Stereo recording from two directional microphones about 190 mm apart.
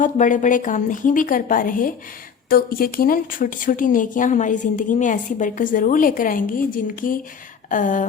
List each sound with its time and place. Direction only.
0.0 s speech: 40° left (ahead or behind)